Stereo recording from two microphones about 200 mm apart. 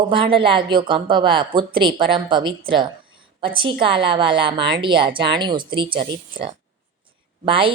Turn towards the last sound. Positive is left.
turn(degrees=-25)  # may be behind; listen again after turning